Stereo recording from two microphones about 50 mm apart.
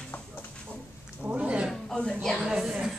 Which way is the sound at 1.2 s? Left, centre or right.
Right.